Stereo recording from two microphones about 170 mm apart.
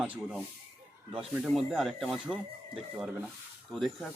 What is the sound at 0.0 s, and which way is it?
Speech, 10° right (ahead or behind).